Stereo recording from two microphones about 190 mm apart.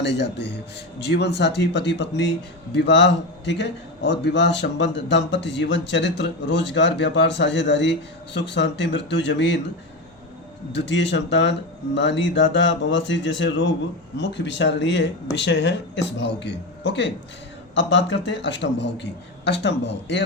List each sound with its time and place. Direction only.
0.0 s a man's voice: 70° left (ahead or behind)
10.7 s a man's voice: 65° left (ahead or behind)